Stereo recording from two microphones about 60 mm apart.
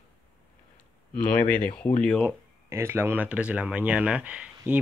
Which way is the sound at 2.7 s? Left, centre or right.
Right.